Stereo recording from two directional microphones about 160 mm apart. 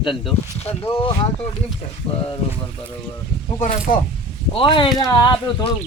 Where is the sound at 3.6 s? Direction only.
55° left (ahead or behind).